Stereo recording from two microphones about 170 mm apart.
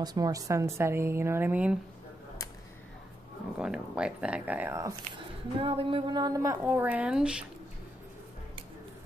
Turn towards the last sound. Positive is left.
turn(degrees=-5)  # may be behind; listen again after turning